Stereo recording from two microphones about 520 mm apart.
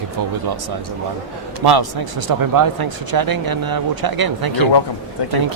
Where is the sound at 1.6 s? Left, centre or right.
Right.